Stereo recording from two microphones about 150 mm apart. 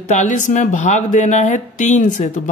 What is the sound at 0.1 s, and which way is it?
Speech, 55° left (ahead or behind).